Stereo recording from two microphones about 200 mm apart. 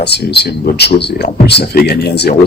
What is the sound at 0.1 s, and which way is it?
Speech, 55° left (ahead or behind).